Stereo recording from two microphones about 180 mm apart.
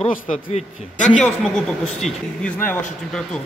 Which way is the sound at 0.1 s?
40° left (ahead or behind).